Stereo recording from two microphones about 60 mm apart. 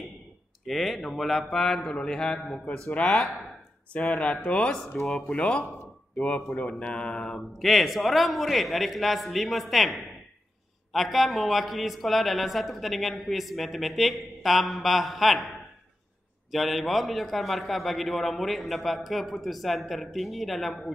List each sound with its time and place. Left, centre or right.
0.7 s speech: centre
3.0 s speech: centre
3.9 s speech: left
7.5 s speech: centre
16.5 s speech: centre